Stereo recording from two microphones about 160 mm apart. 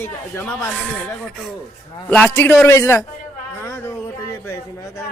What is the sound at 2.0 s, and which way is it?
Speech, 10° left (ahead or behind).